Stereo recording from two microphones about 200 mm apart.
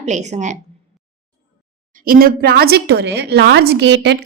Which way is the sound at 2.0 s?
45° right (ahead or behind).